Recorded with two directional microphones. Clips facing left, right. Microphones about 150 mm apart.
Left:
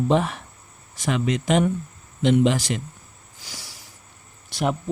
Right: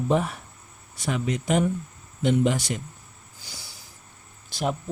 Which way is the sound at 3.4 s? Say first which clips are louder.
Left 3 dB; 90° left.